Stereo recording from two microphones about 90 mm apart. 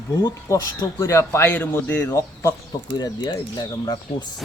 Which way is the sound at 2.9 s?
50° left (ahead or behind).